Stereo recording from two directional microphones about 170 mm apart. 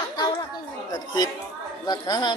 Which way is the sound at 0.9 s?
25° left (ahead or behind).